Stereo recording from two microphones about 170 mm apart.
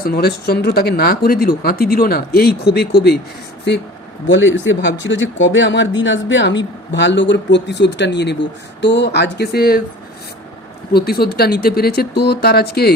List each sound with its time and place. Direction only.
0.0 s speech: 65° left (ahead or behind)
4.3 s speech: 90° left; by 9.8 s 65° left (ahead or behind)
10.9 s speech: 65° left (ahead or behind)